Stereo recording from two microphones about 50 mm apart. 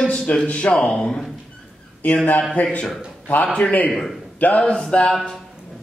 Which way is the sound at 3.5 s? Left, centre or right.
Left.